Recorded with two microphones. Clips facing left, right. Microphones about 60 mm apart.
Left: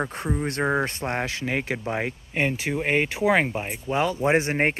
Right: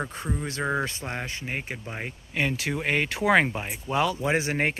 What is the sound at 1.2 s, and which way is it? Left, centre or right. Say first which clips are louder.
Speech: left 6 dB; left.